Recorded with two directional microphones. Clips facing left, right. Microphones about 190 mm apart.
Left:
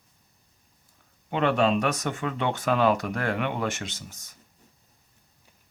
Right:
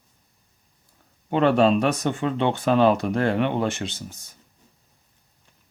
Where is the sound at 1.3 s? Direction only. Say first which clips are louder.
Right 5 dB; 35° right (ahead or behind).